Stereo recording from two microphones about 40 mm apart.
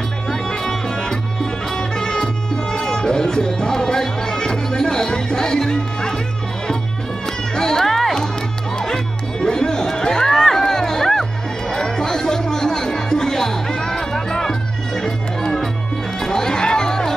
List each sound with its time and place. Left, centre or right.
0.3 s music: centre
7.2 s music: centre